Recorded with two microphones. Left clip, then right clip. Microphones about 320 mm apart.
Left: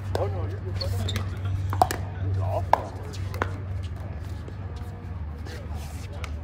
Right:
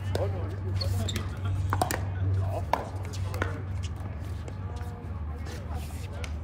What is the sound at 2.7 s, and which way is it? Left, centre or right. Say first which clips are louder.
Chopping: left 7 dB; left.